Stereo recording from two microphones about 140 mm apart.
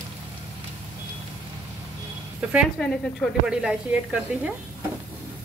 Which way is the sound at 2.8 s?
10° left (ahead or behind).